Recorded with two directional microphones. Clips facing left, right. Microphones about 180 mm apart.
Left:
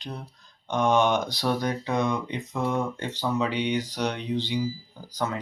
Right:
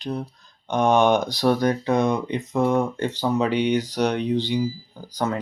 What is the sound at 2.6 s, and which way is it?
Speech, 60° right (ahead or behind).